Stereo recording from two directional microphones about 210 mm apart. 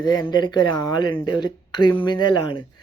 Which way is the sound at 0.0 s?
20° left (ahead or behind).